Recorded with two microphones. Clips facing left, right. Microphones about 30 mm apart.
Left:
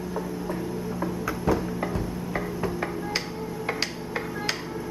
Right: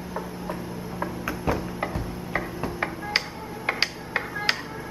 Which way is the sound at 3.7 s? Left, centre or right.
Right.